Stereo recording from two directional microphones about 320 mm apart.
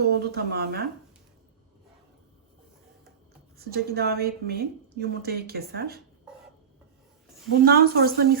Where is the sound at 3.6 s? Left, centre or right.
Right.